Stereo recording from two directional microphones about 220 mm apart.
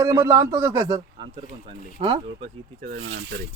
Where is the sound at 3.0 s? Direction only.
65° right (ahead or behind).